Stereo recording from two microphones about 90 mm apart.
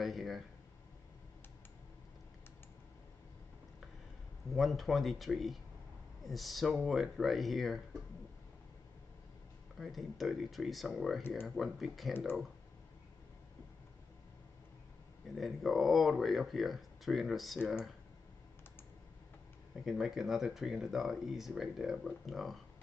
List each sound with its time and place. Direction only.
0.0 s speech: centre (ahead or behind)
4.6 s speech: centre (ahead or behind)
9.8 s speech: centre (ahead or behind)
15.3 s speech: centre (ahead or behind)
19.7 s speech: 5° right (ahead or behind)